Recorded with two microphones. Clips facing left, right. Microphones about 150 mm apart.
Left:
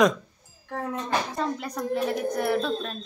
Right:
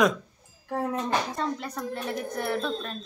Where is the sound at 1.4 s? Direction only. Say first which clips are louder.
Left 2 dB; 5° left (ahead or behind).